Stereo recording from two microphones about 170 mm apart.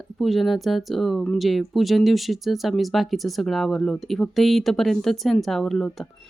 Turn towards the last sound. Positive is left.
turn(degrees=0)  # may be behind; listen again after turning